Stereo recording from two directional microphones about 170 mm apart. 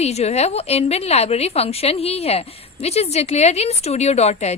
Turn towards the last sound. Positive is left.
turn(degrees=40)  # may be behind; listen again after turning